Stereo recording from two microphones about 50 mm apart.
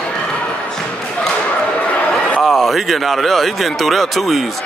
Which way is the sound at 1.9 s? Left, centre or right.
Left.